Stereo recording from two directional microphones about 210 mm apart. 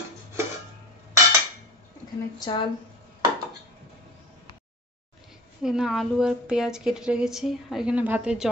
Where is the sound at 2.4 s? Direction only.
20° left (ahead or behind).